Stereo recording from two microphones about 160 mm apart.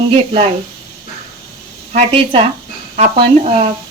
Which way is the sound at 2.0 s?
35° right (ahead or behind).